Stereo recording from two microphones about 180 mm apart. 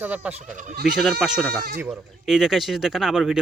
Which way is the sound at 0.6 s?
45° right (ahead or behind).